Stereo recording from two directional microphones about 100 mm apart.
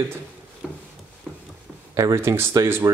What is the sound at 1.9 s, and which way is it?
Speech, 30° right (ahead or behind).